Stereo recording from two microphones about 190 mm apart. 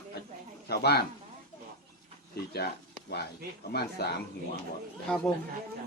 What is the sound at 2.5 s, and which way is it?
Speech, 55° left (ahead or behind).